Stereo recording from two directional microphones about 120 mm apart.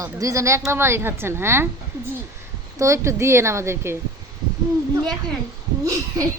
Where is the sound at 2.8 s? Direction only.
25° right (ahead or behind).